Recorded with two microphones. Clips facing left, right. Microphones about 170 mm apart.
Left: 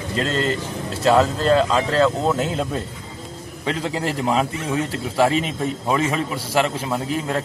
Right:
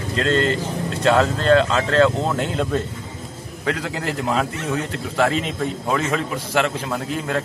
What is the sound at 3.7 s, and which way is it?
Speech, 30° left (ahead or behind).